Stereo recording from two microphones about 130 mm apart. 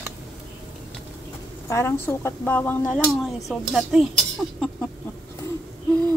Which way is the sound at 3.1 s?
Centre (ahead or behind).